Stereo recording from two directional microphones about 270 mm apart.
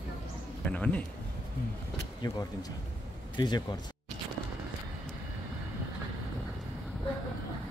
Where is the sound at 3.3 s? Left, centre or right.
Centre.